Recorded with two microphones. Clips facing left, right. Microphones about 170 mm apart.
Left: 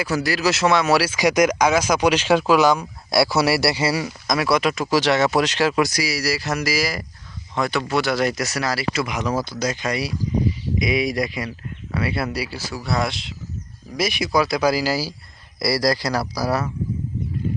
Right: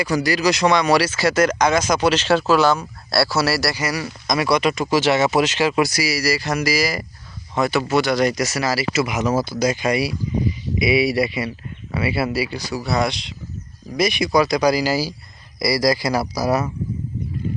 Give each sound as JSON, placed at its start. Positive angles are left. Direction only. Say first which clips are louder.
{"t": 0.0, "sound": "speech", "louder": "right 2 dB", "side_deg": 0}
{"t": 4.0, "sound": "a man's voice", "louder": "right 1 dB", "side_deg": 0}
{"t": 16.0, "sound": "speech", "louder": "right 3 dB", "side_deg": -15}